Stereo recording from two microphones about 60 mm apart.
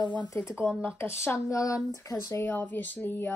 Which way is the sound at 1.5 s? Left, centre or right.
Left.